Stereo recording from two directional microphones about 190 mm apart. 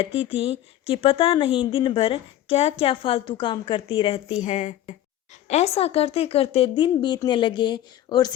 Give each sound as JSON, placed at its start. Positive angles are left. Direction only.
{"t": 0.0, "sound": "speech", "side_deg": 30}
{"t": 4.4, "sound": "a woman's voice", "side_deg": 40}